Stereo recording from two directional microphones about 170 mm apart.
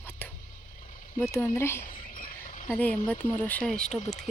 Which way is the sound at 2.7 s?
10° left (ahead or behind).